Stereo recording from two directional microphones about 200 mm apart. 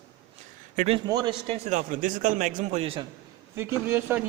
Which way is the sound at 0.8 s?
30° right (ahead or behind).